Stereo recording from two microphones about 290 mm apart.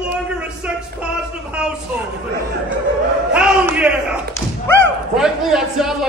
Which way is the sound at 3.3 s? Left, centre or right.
Centre.